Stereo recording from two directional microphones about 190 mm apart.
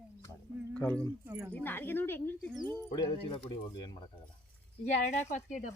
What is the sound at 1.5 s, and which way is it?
Speech, 10° left (ahead or behind).